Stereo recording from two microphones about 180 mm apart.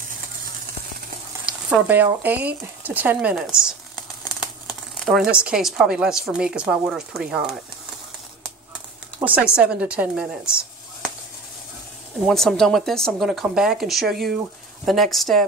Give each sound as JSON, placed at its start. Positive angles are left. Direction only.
{"t": 1.4, "sound": "frying", "side_deg": -10}
{"t": 2.2, "sound": "speech", "side_deg": -10}
{"t": 9.2, "sound": "speech", "side_deg": -10}
{"t": 12.2, "sound": "speech", "side_deg": 0}